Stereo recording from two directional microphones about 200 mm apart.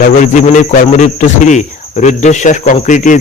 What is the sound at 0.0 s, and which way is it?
Cricket, 40° left (ahead or behind).